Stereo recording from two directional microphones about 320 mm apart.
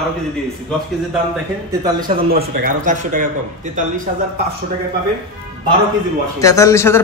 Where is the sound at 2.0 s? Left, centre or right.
Right.